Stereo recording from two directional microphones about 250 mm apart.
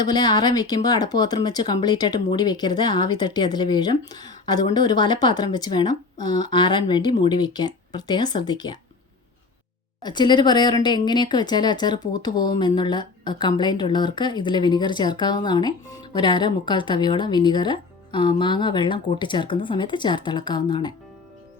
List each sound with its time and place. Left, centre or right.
0.1 s a woman's voice: centre
10.0 s a woman's voice: centre